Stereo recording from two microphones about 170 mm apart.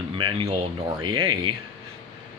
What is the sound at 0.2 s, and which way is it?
A man's voice, 30° right (ahead or behind).